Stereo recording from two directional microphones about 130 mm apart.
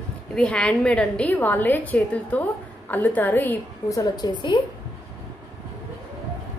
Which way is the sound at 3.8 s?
25° left (ahead or behind).